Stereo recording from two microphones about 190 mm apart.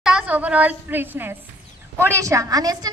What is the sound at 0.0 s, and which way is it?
A woman's voice, 5° right (ahead or behind).